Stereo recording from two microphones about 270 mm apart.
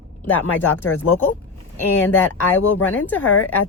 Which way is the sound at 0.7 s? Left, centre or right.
Left.